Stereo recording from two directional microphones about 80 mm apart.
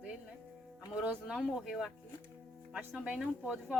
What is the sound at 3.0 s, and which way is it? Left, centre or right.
Speech, centre.